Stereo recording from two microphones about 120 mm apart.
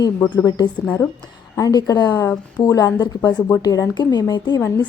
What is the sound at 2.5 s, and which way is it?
A woman's voice, 30° left (ahead or behind).